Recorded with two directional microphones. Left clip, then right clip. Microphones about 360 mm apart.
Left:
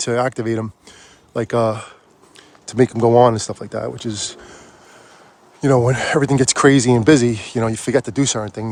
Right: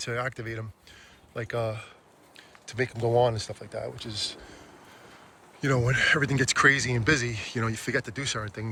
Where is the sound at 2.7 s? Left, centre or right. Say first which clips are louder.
Left 12 dB; left.